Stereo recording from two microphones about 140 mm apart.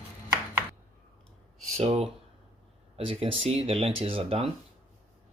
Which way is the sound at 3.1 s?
40° right (ahead or behind).